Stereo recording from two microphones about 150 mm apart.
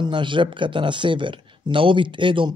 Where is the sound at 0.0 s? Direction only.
30° right (ahead or behind).